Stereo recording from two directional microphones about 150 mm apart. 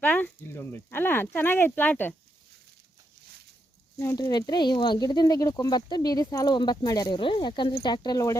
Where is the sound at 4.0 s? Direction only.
20° left (ahead or behind).